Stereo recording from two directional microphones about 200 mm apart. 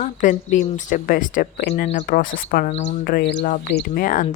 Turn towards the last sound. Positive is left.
turn(degrees=45)  # may be behind; listen again after turning